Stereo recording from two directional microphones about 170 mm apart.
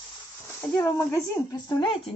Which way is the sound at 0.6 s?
15° left (ahead or behind).